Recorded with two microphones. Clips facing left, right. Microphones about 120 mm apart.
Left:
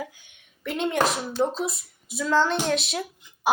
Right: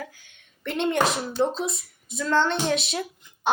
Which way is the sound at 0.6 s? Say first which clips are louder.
Right 1 dB; centre (ahead or behind).